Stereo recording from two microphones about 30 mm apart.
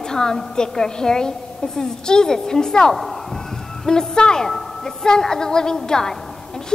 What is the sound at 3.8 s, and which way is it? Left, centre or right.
A woman's voice, left.